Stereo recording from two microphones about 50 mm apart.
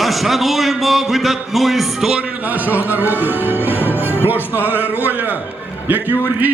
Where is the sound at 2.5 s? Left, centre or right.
Right.